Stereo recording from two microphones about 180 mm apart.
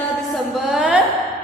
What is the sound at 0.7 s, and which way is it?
Speech, centre (ahead or behind).